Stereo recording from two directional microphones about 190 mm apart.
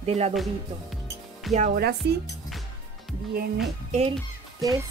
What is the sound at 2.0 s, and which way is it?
Speech, 60° right (ahead or behind).